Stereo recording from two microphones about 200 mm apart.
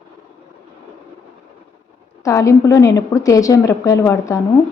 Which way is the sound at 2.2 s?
15° left (ahead or behind).